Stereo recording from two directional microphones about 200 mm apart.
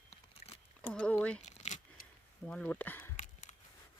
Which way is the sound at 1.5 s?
35° left (ahead or behind).